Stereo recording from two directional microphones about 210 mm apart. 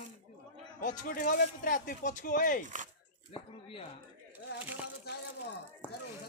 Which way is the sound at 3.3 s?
25° left (ahead or behind).